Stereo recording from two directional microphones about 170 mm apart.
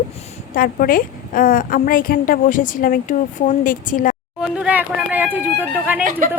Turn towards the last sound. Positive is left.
turn(degrees=-50)  # may be behind; listen again after turning